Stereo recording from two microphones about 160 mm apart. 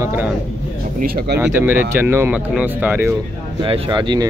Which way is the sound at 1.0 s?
70° right (ahead or behind).